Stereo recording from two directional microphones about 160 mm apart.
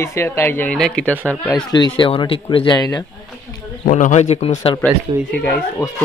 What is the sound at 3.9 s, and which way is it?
Speech, 50° left (ahead or behind).